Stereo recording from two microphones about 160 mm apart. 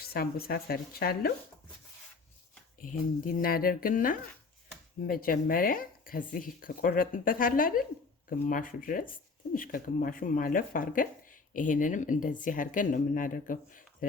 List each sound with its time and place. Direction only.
0.1 s speech: 70° left (ahead or behind)
3.4 s speech: 65° left (ahead or behind)